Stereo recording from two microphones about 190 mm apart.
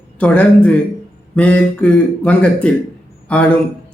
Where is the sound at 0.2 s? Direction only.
5° left (ahead or behind).